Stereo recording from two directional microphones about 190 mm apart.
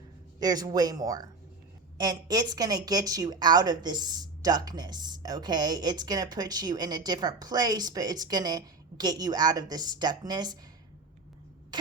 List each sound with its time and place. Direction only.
0.3 s a woman's voice: 20° right (ahead or behind)
11.7 s rodents: 20° right (ahead or behind)